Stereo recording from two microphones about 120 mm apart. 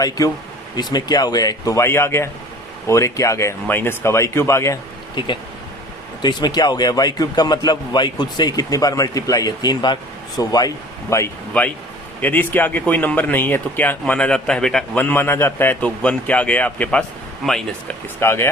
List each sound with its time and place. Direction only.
0.8 s a man's voice: 35° left (ahead or behind)
5.1 s a man's voice: 40° left (ahead or behind); by 11.3 s 25° left (ahead or behind)
11.6 s a man's voice: 10° left (ahead or behind)
15.0 s a man's voice: 20° left (ahead or behind)
18.2 s speech: 20° left (ahead or behind)